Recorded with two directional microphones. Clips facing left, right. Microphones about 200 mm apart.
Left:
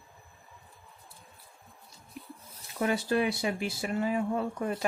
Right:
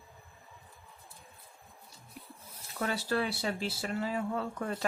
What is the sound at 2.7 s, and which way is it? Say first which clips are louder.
Speech: left 4 dB; 15° left (ahead or behind).